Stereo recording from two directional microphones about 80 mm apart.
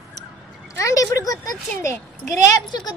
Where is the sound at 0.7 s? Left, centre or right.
Left.